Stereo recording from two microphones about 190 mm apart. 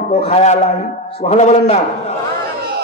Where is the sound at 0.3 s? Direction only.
35° left (ahead or behind).